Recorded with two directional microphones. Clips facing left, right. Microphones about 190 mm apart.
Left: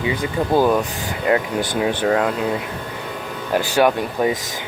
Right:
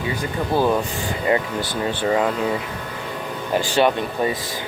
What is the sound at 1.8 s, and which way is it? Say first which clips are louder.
Speech: left 3 dB; 10° left (ahead or behind).